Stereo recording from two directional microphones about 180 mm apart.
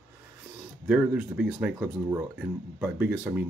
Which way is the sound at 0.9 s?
5° right (ahead or behind).